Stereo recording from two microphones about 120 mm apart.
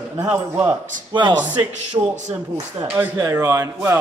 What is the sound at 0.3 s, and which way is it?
Speech, 15° right (ahead or behind).